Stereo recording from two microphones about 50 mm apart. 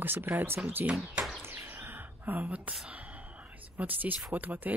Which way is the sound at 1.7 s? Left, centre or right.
Right.